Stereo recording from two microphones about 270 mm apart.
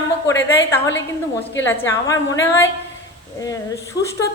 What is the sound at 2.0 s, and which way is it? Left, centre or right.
Speech, centre.